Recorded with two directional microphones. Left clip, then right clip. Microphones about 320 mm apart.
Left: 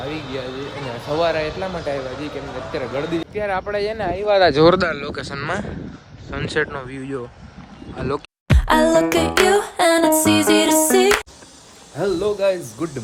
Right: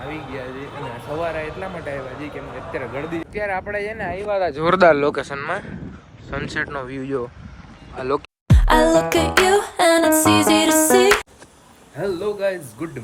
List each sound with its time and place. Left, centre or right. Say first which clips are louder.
1.2 s speech: left 6 dB; centre
4.3 s speech: left 8 dB; left
4.6 s speech: left 1 dB; centre
4.9 s speech: right 9 dB; centre
11.9 s speech: left 3 dB; centre